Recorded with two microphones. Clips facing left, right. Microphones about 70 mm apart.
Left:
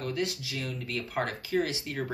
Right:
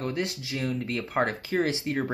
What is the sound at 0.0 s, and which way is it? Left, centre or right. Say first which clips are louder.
Speech: right 2 dB; right.